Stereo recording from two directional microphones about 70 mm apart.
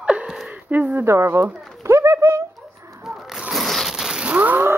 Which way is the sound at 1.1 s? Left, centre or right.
Right.